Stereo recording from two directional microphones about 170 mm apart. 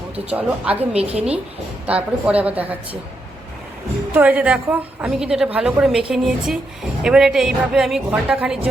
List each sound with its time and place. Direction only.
0.3 s a woman's voice: 10° right (ahead or behind)
0.9 s a woman's voice: 35° right (ahead or behind)
1.9 s a woman's voice: 10° right (ahead or behind)
4.1 s a woman's voice: 10° right (ahead or behind)